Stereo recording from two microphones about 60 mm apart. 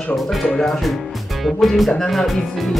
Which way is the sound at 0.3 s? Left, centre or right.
Centre.